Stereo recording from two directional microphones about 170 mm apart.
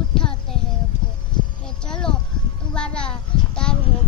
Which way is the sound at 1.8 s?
5° left (ahead or behind).